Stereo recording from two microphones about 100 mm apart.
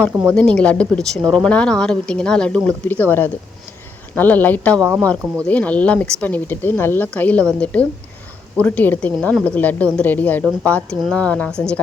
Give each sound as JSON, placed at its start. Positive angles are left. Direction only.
{"t": 0.1, "sound": "speech", "side_deg": -20}
{"t": 0.3, "sound": "speech", "side_deg": 10}
{"t": 2.6, "sound": "speech", "side_deg": 20}